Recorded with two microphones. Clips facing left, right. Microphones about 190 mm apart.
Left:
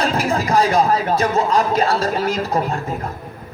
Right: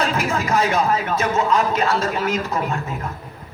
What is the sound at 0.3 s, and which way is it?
Speech, 35° left (ahead or behind).